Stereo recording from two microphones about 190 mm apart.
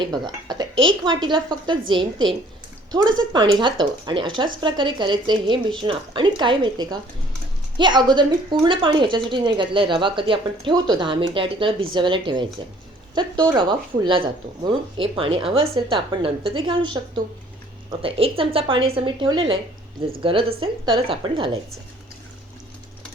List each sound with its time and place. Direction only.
0.0 s a woman's voice: 20° right (ahead or behind)